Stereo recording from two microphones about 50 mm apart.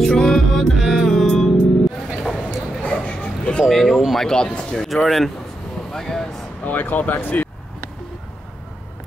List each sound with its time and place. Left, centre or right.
0.0 s music: centre
2.8 s a sound: left
3.7 s speech: centre
4.8 s speech: centre
6.6 s speech: left